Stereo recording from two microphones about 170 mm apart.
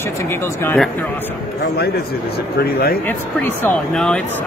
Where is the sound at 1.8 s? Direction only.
65° left (ahead or behind).